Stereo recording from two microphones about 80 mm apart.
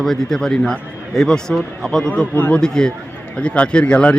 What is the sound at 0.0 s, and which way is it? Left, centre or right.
A man's voice, centre.